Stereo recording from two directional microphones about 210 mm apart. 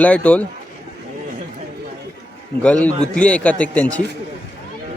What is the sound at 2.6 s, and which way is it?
A man's voice, 5° left (ahead or behind).